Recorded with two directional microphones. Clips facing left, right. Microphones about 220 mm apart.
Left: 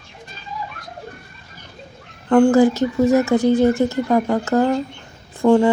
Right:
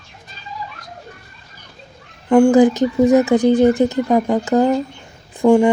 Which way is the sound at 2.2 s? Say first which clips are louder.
Right 2 dB; 10° right (ahead or behind).